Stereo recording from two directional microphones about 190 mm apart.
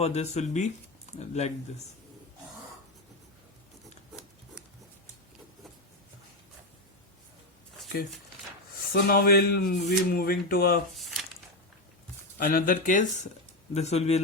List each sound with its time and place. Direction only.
0.0 s speech: 35° left (ahead or behind)
8.9 s speech: 50° left (ahead or behind)
10.9 s a sound: centre (ahead or behind)
12.4 s speech: 50° left (ahead or behind)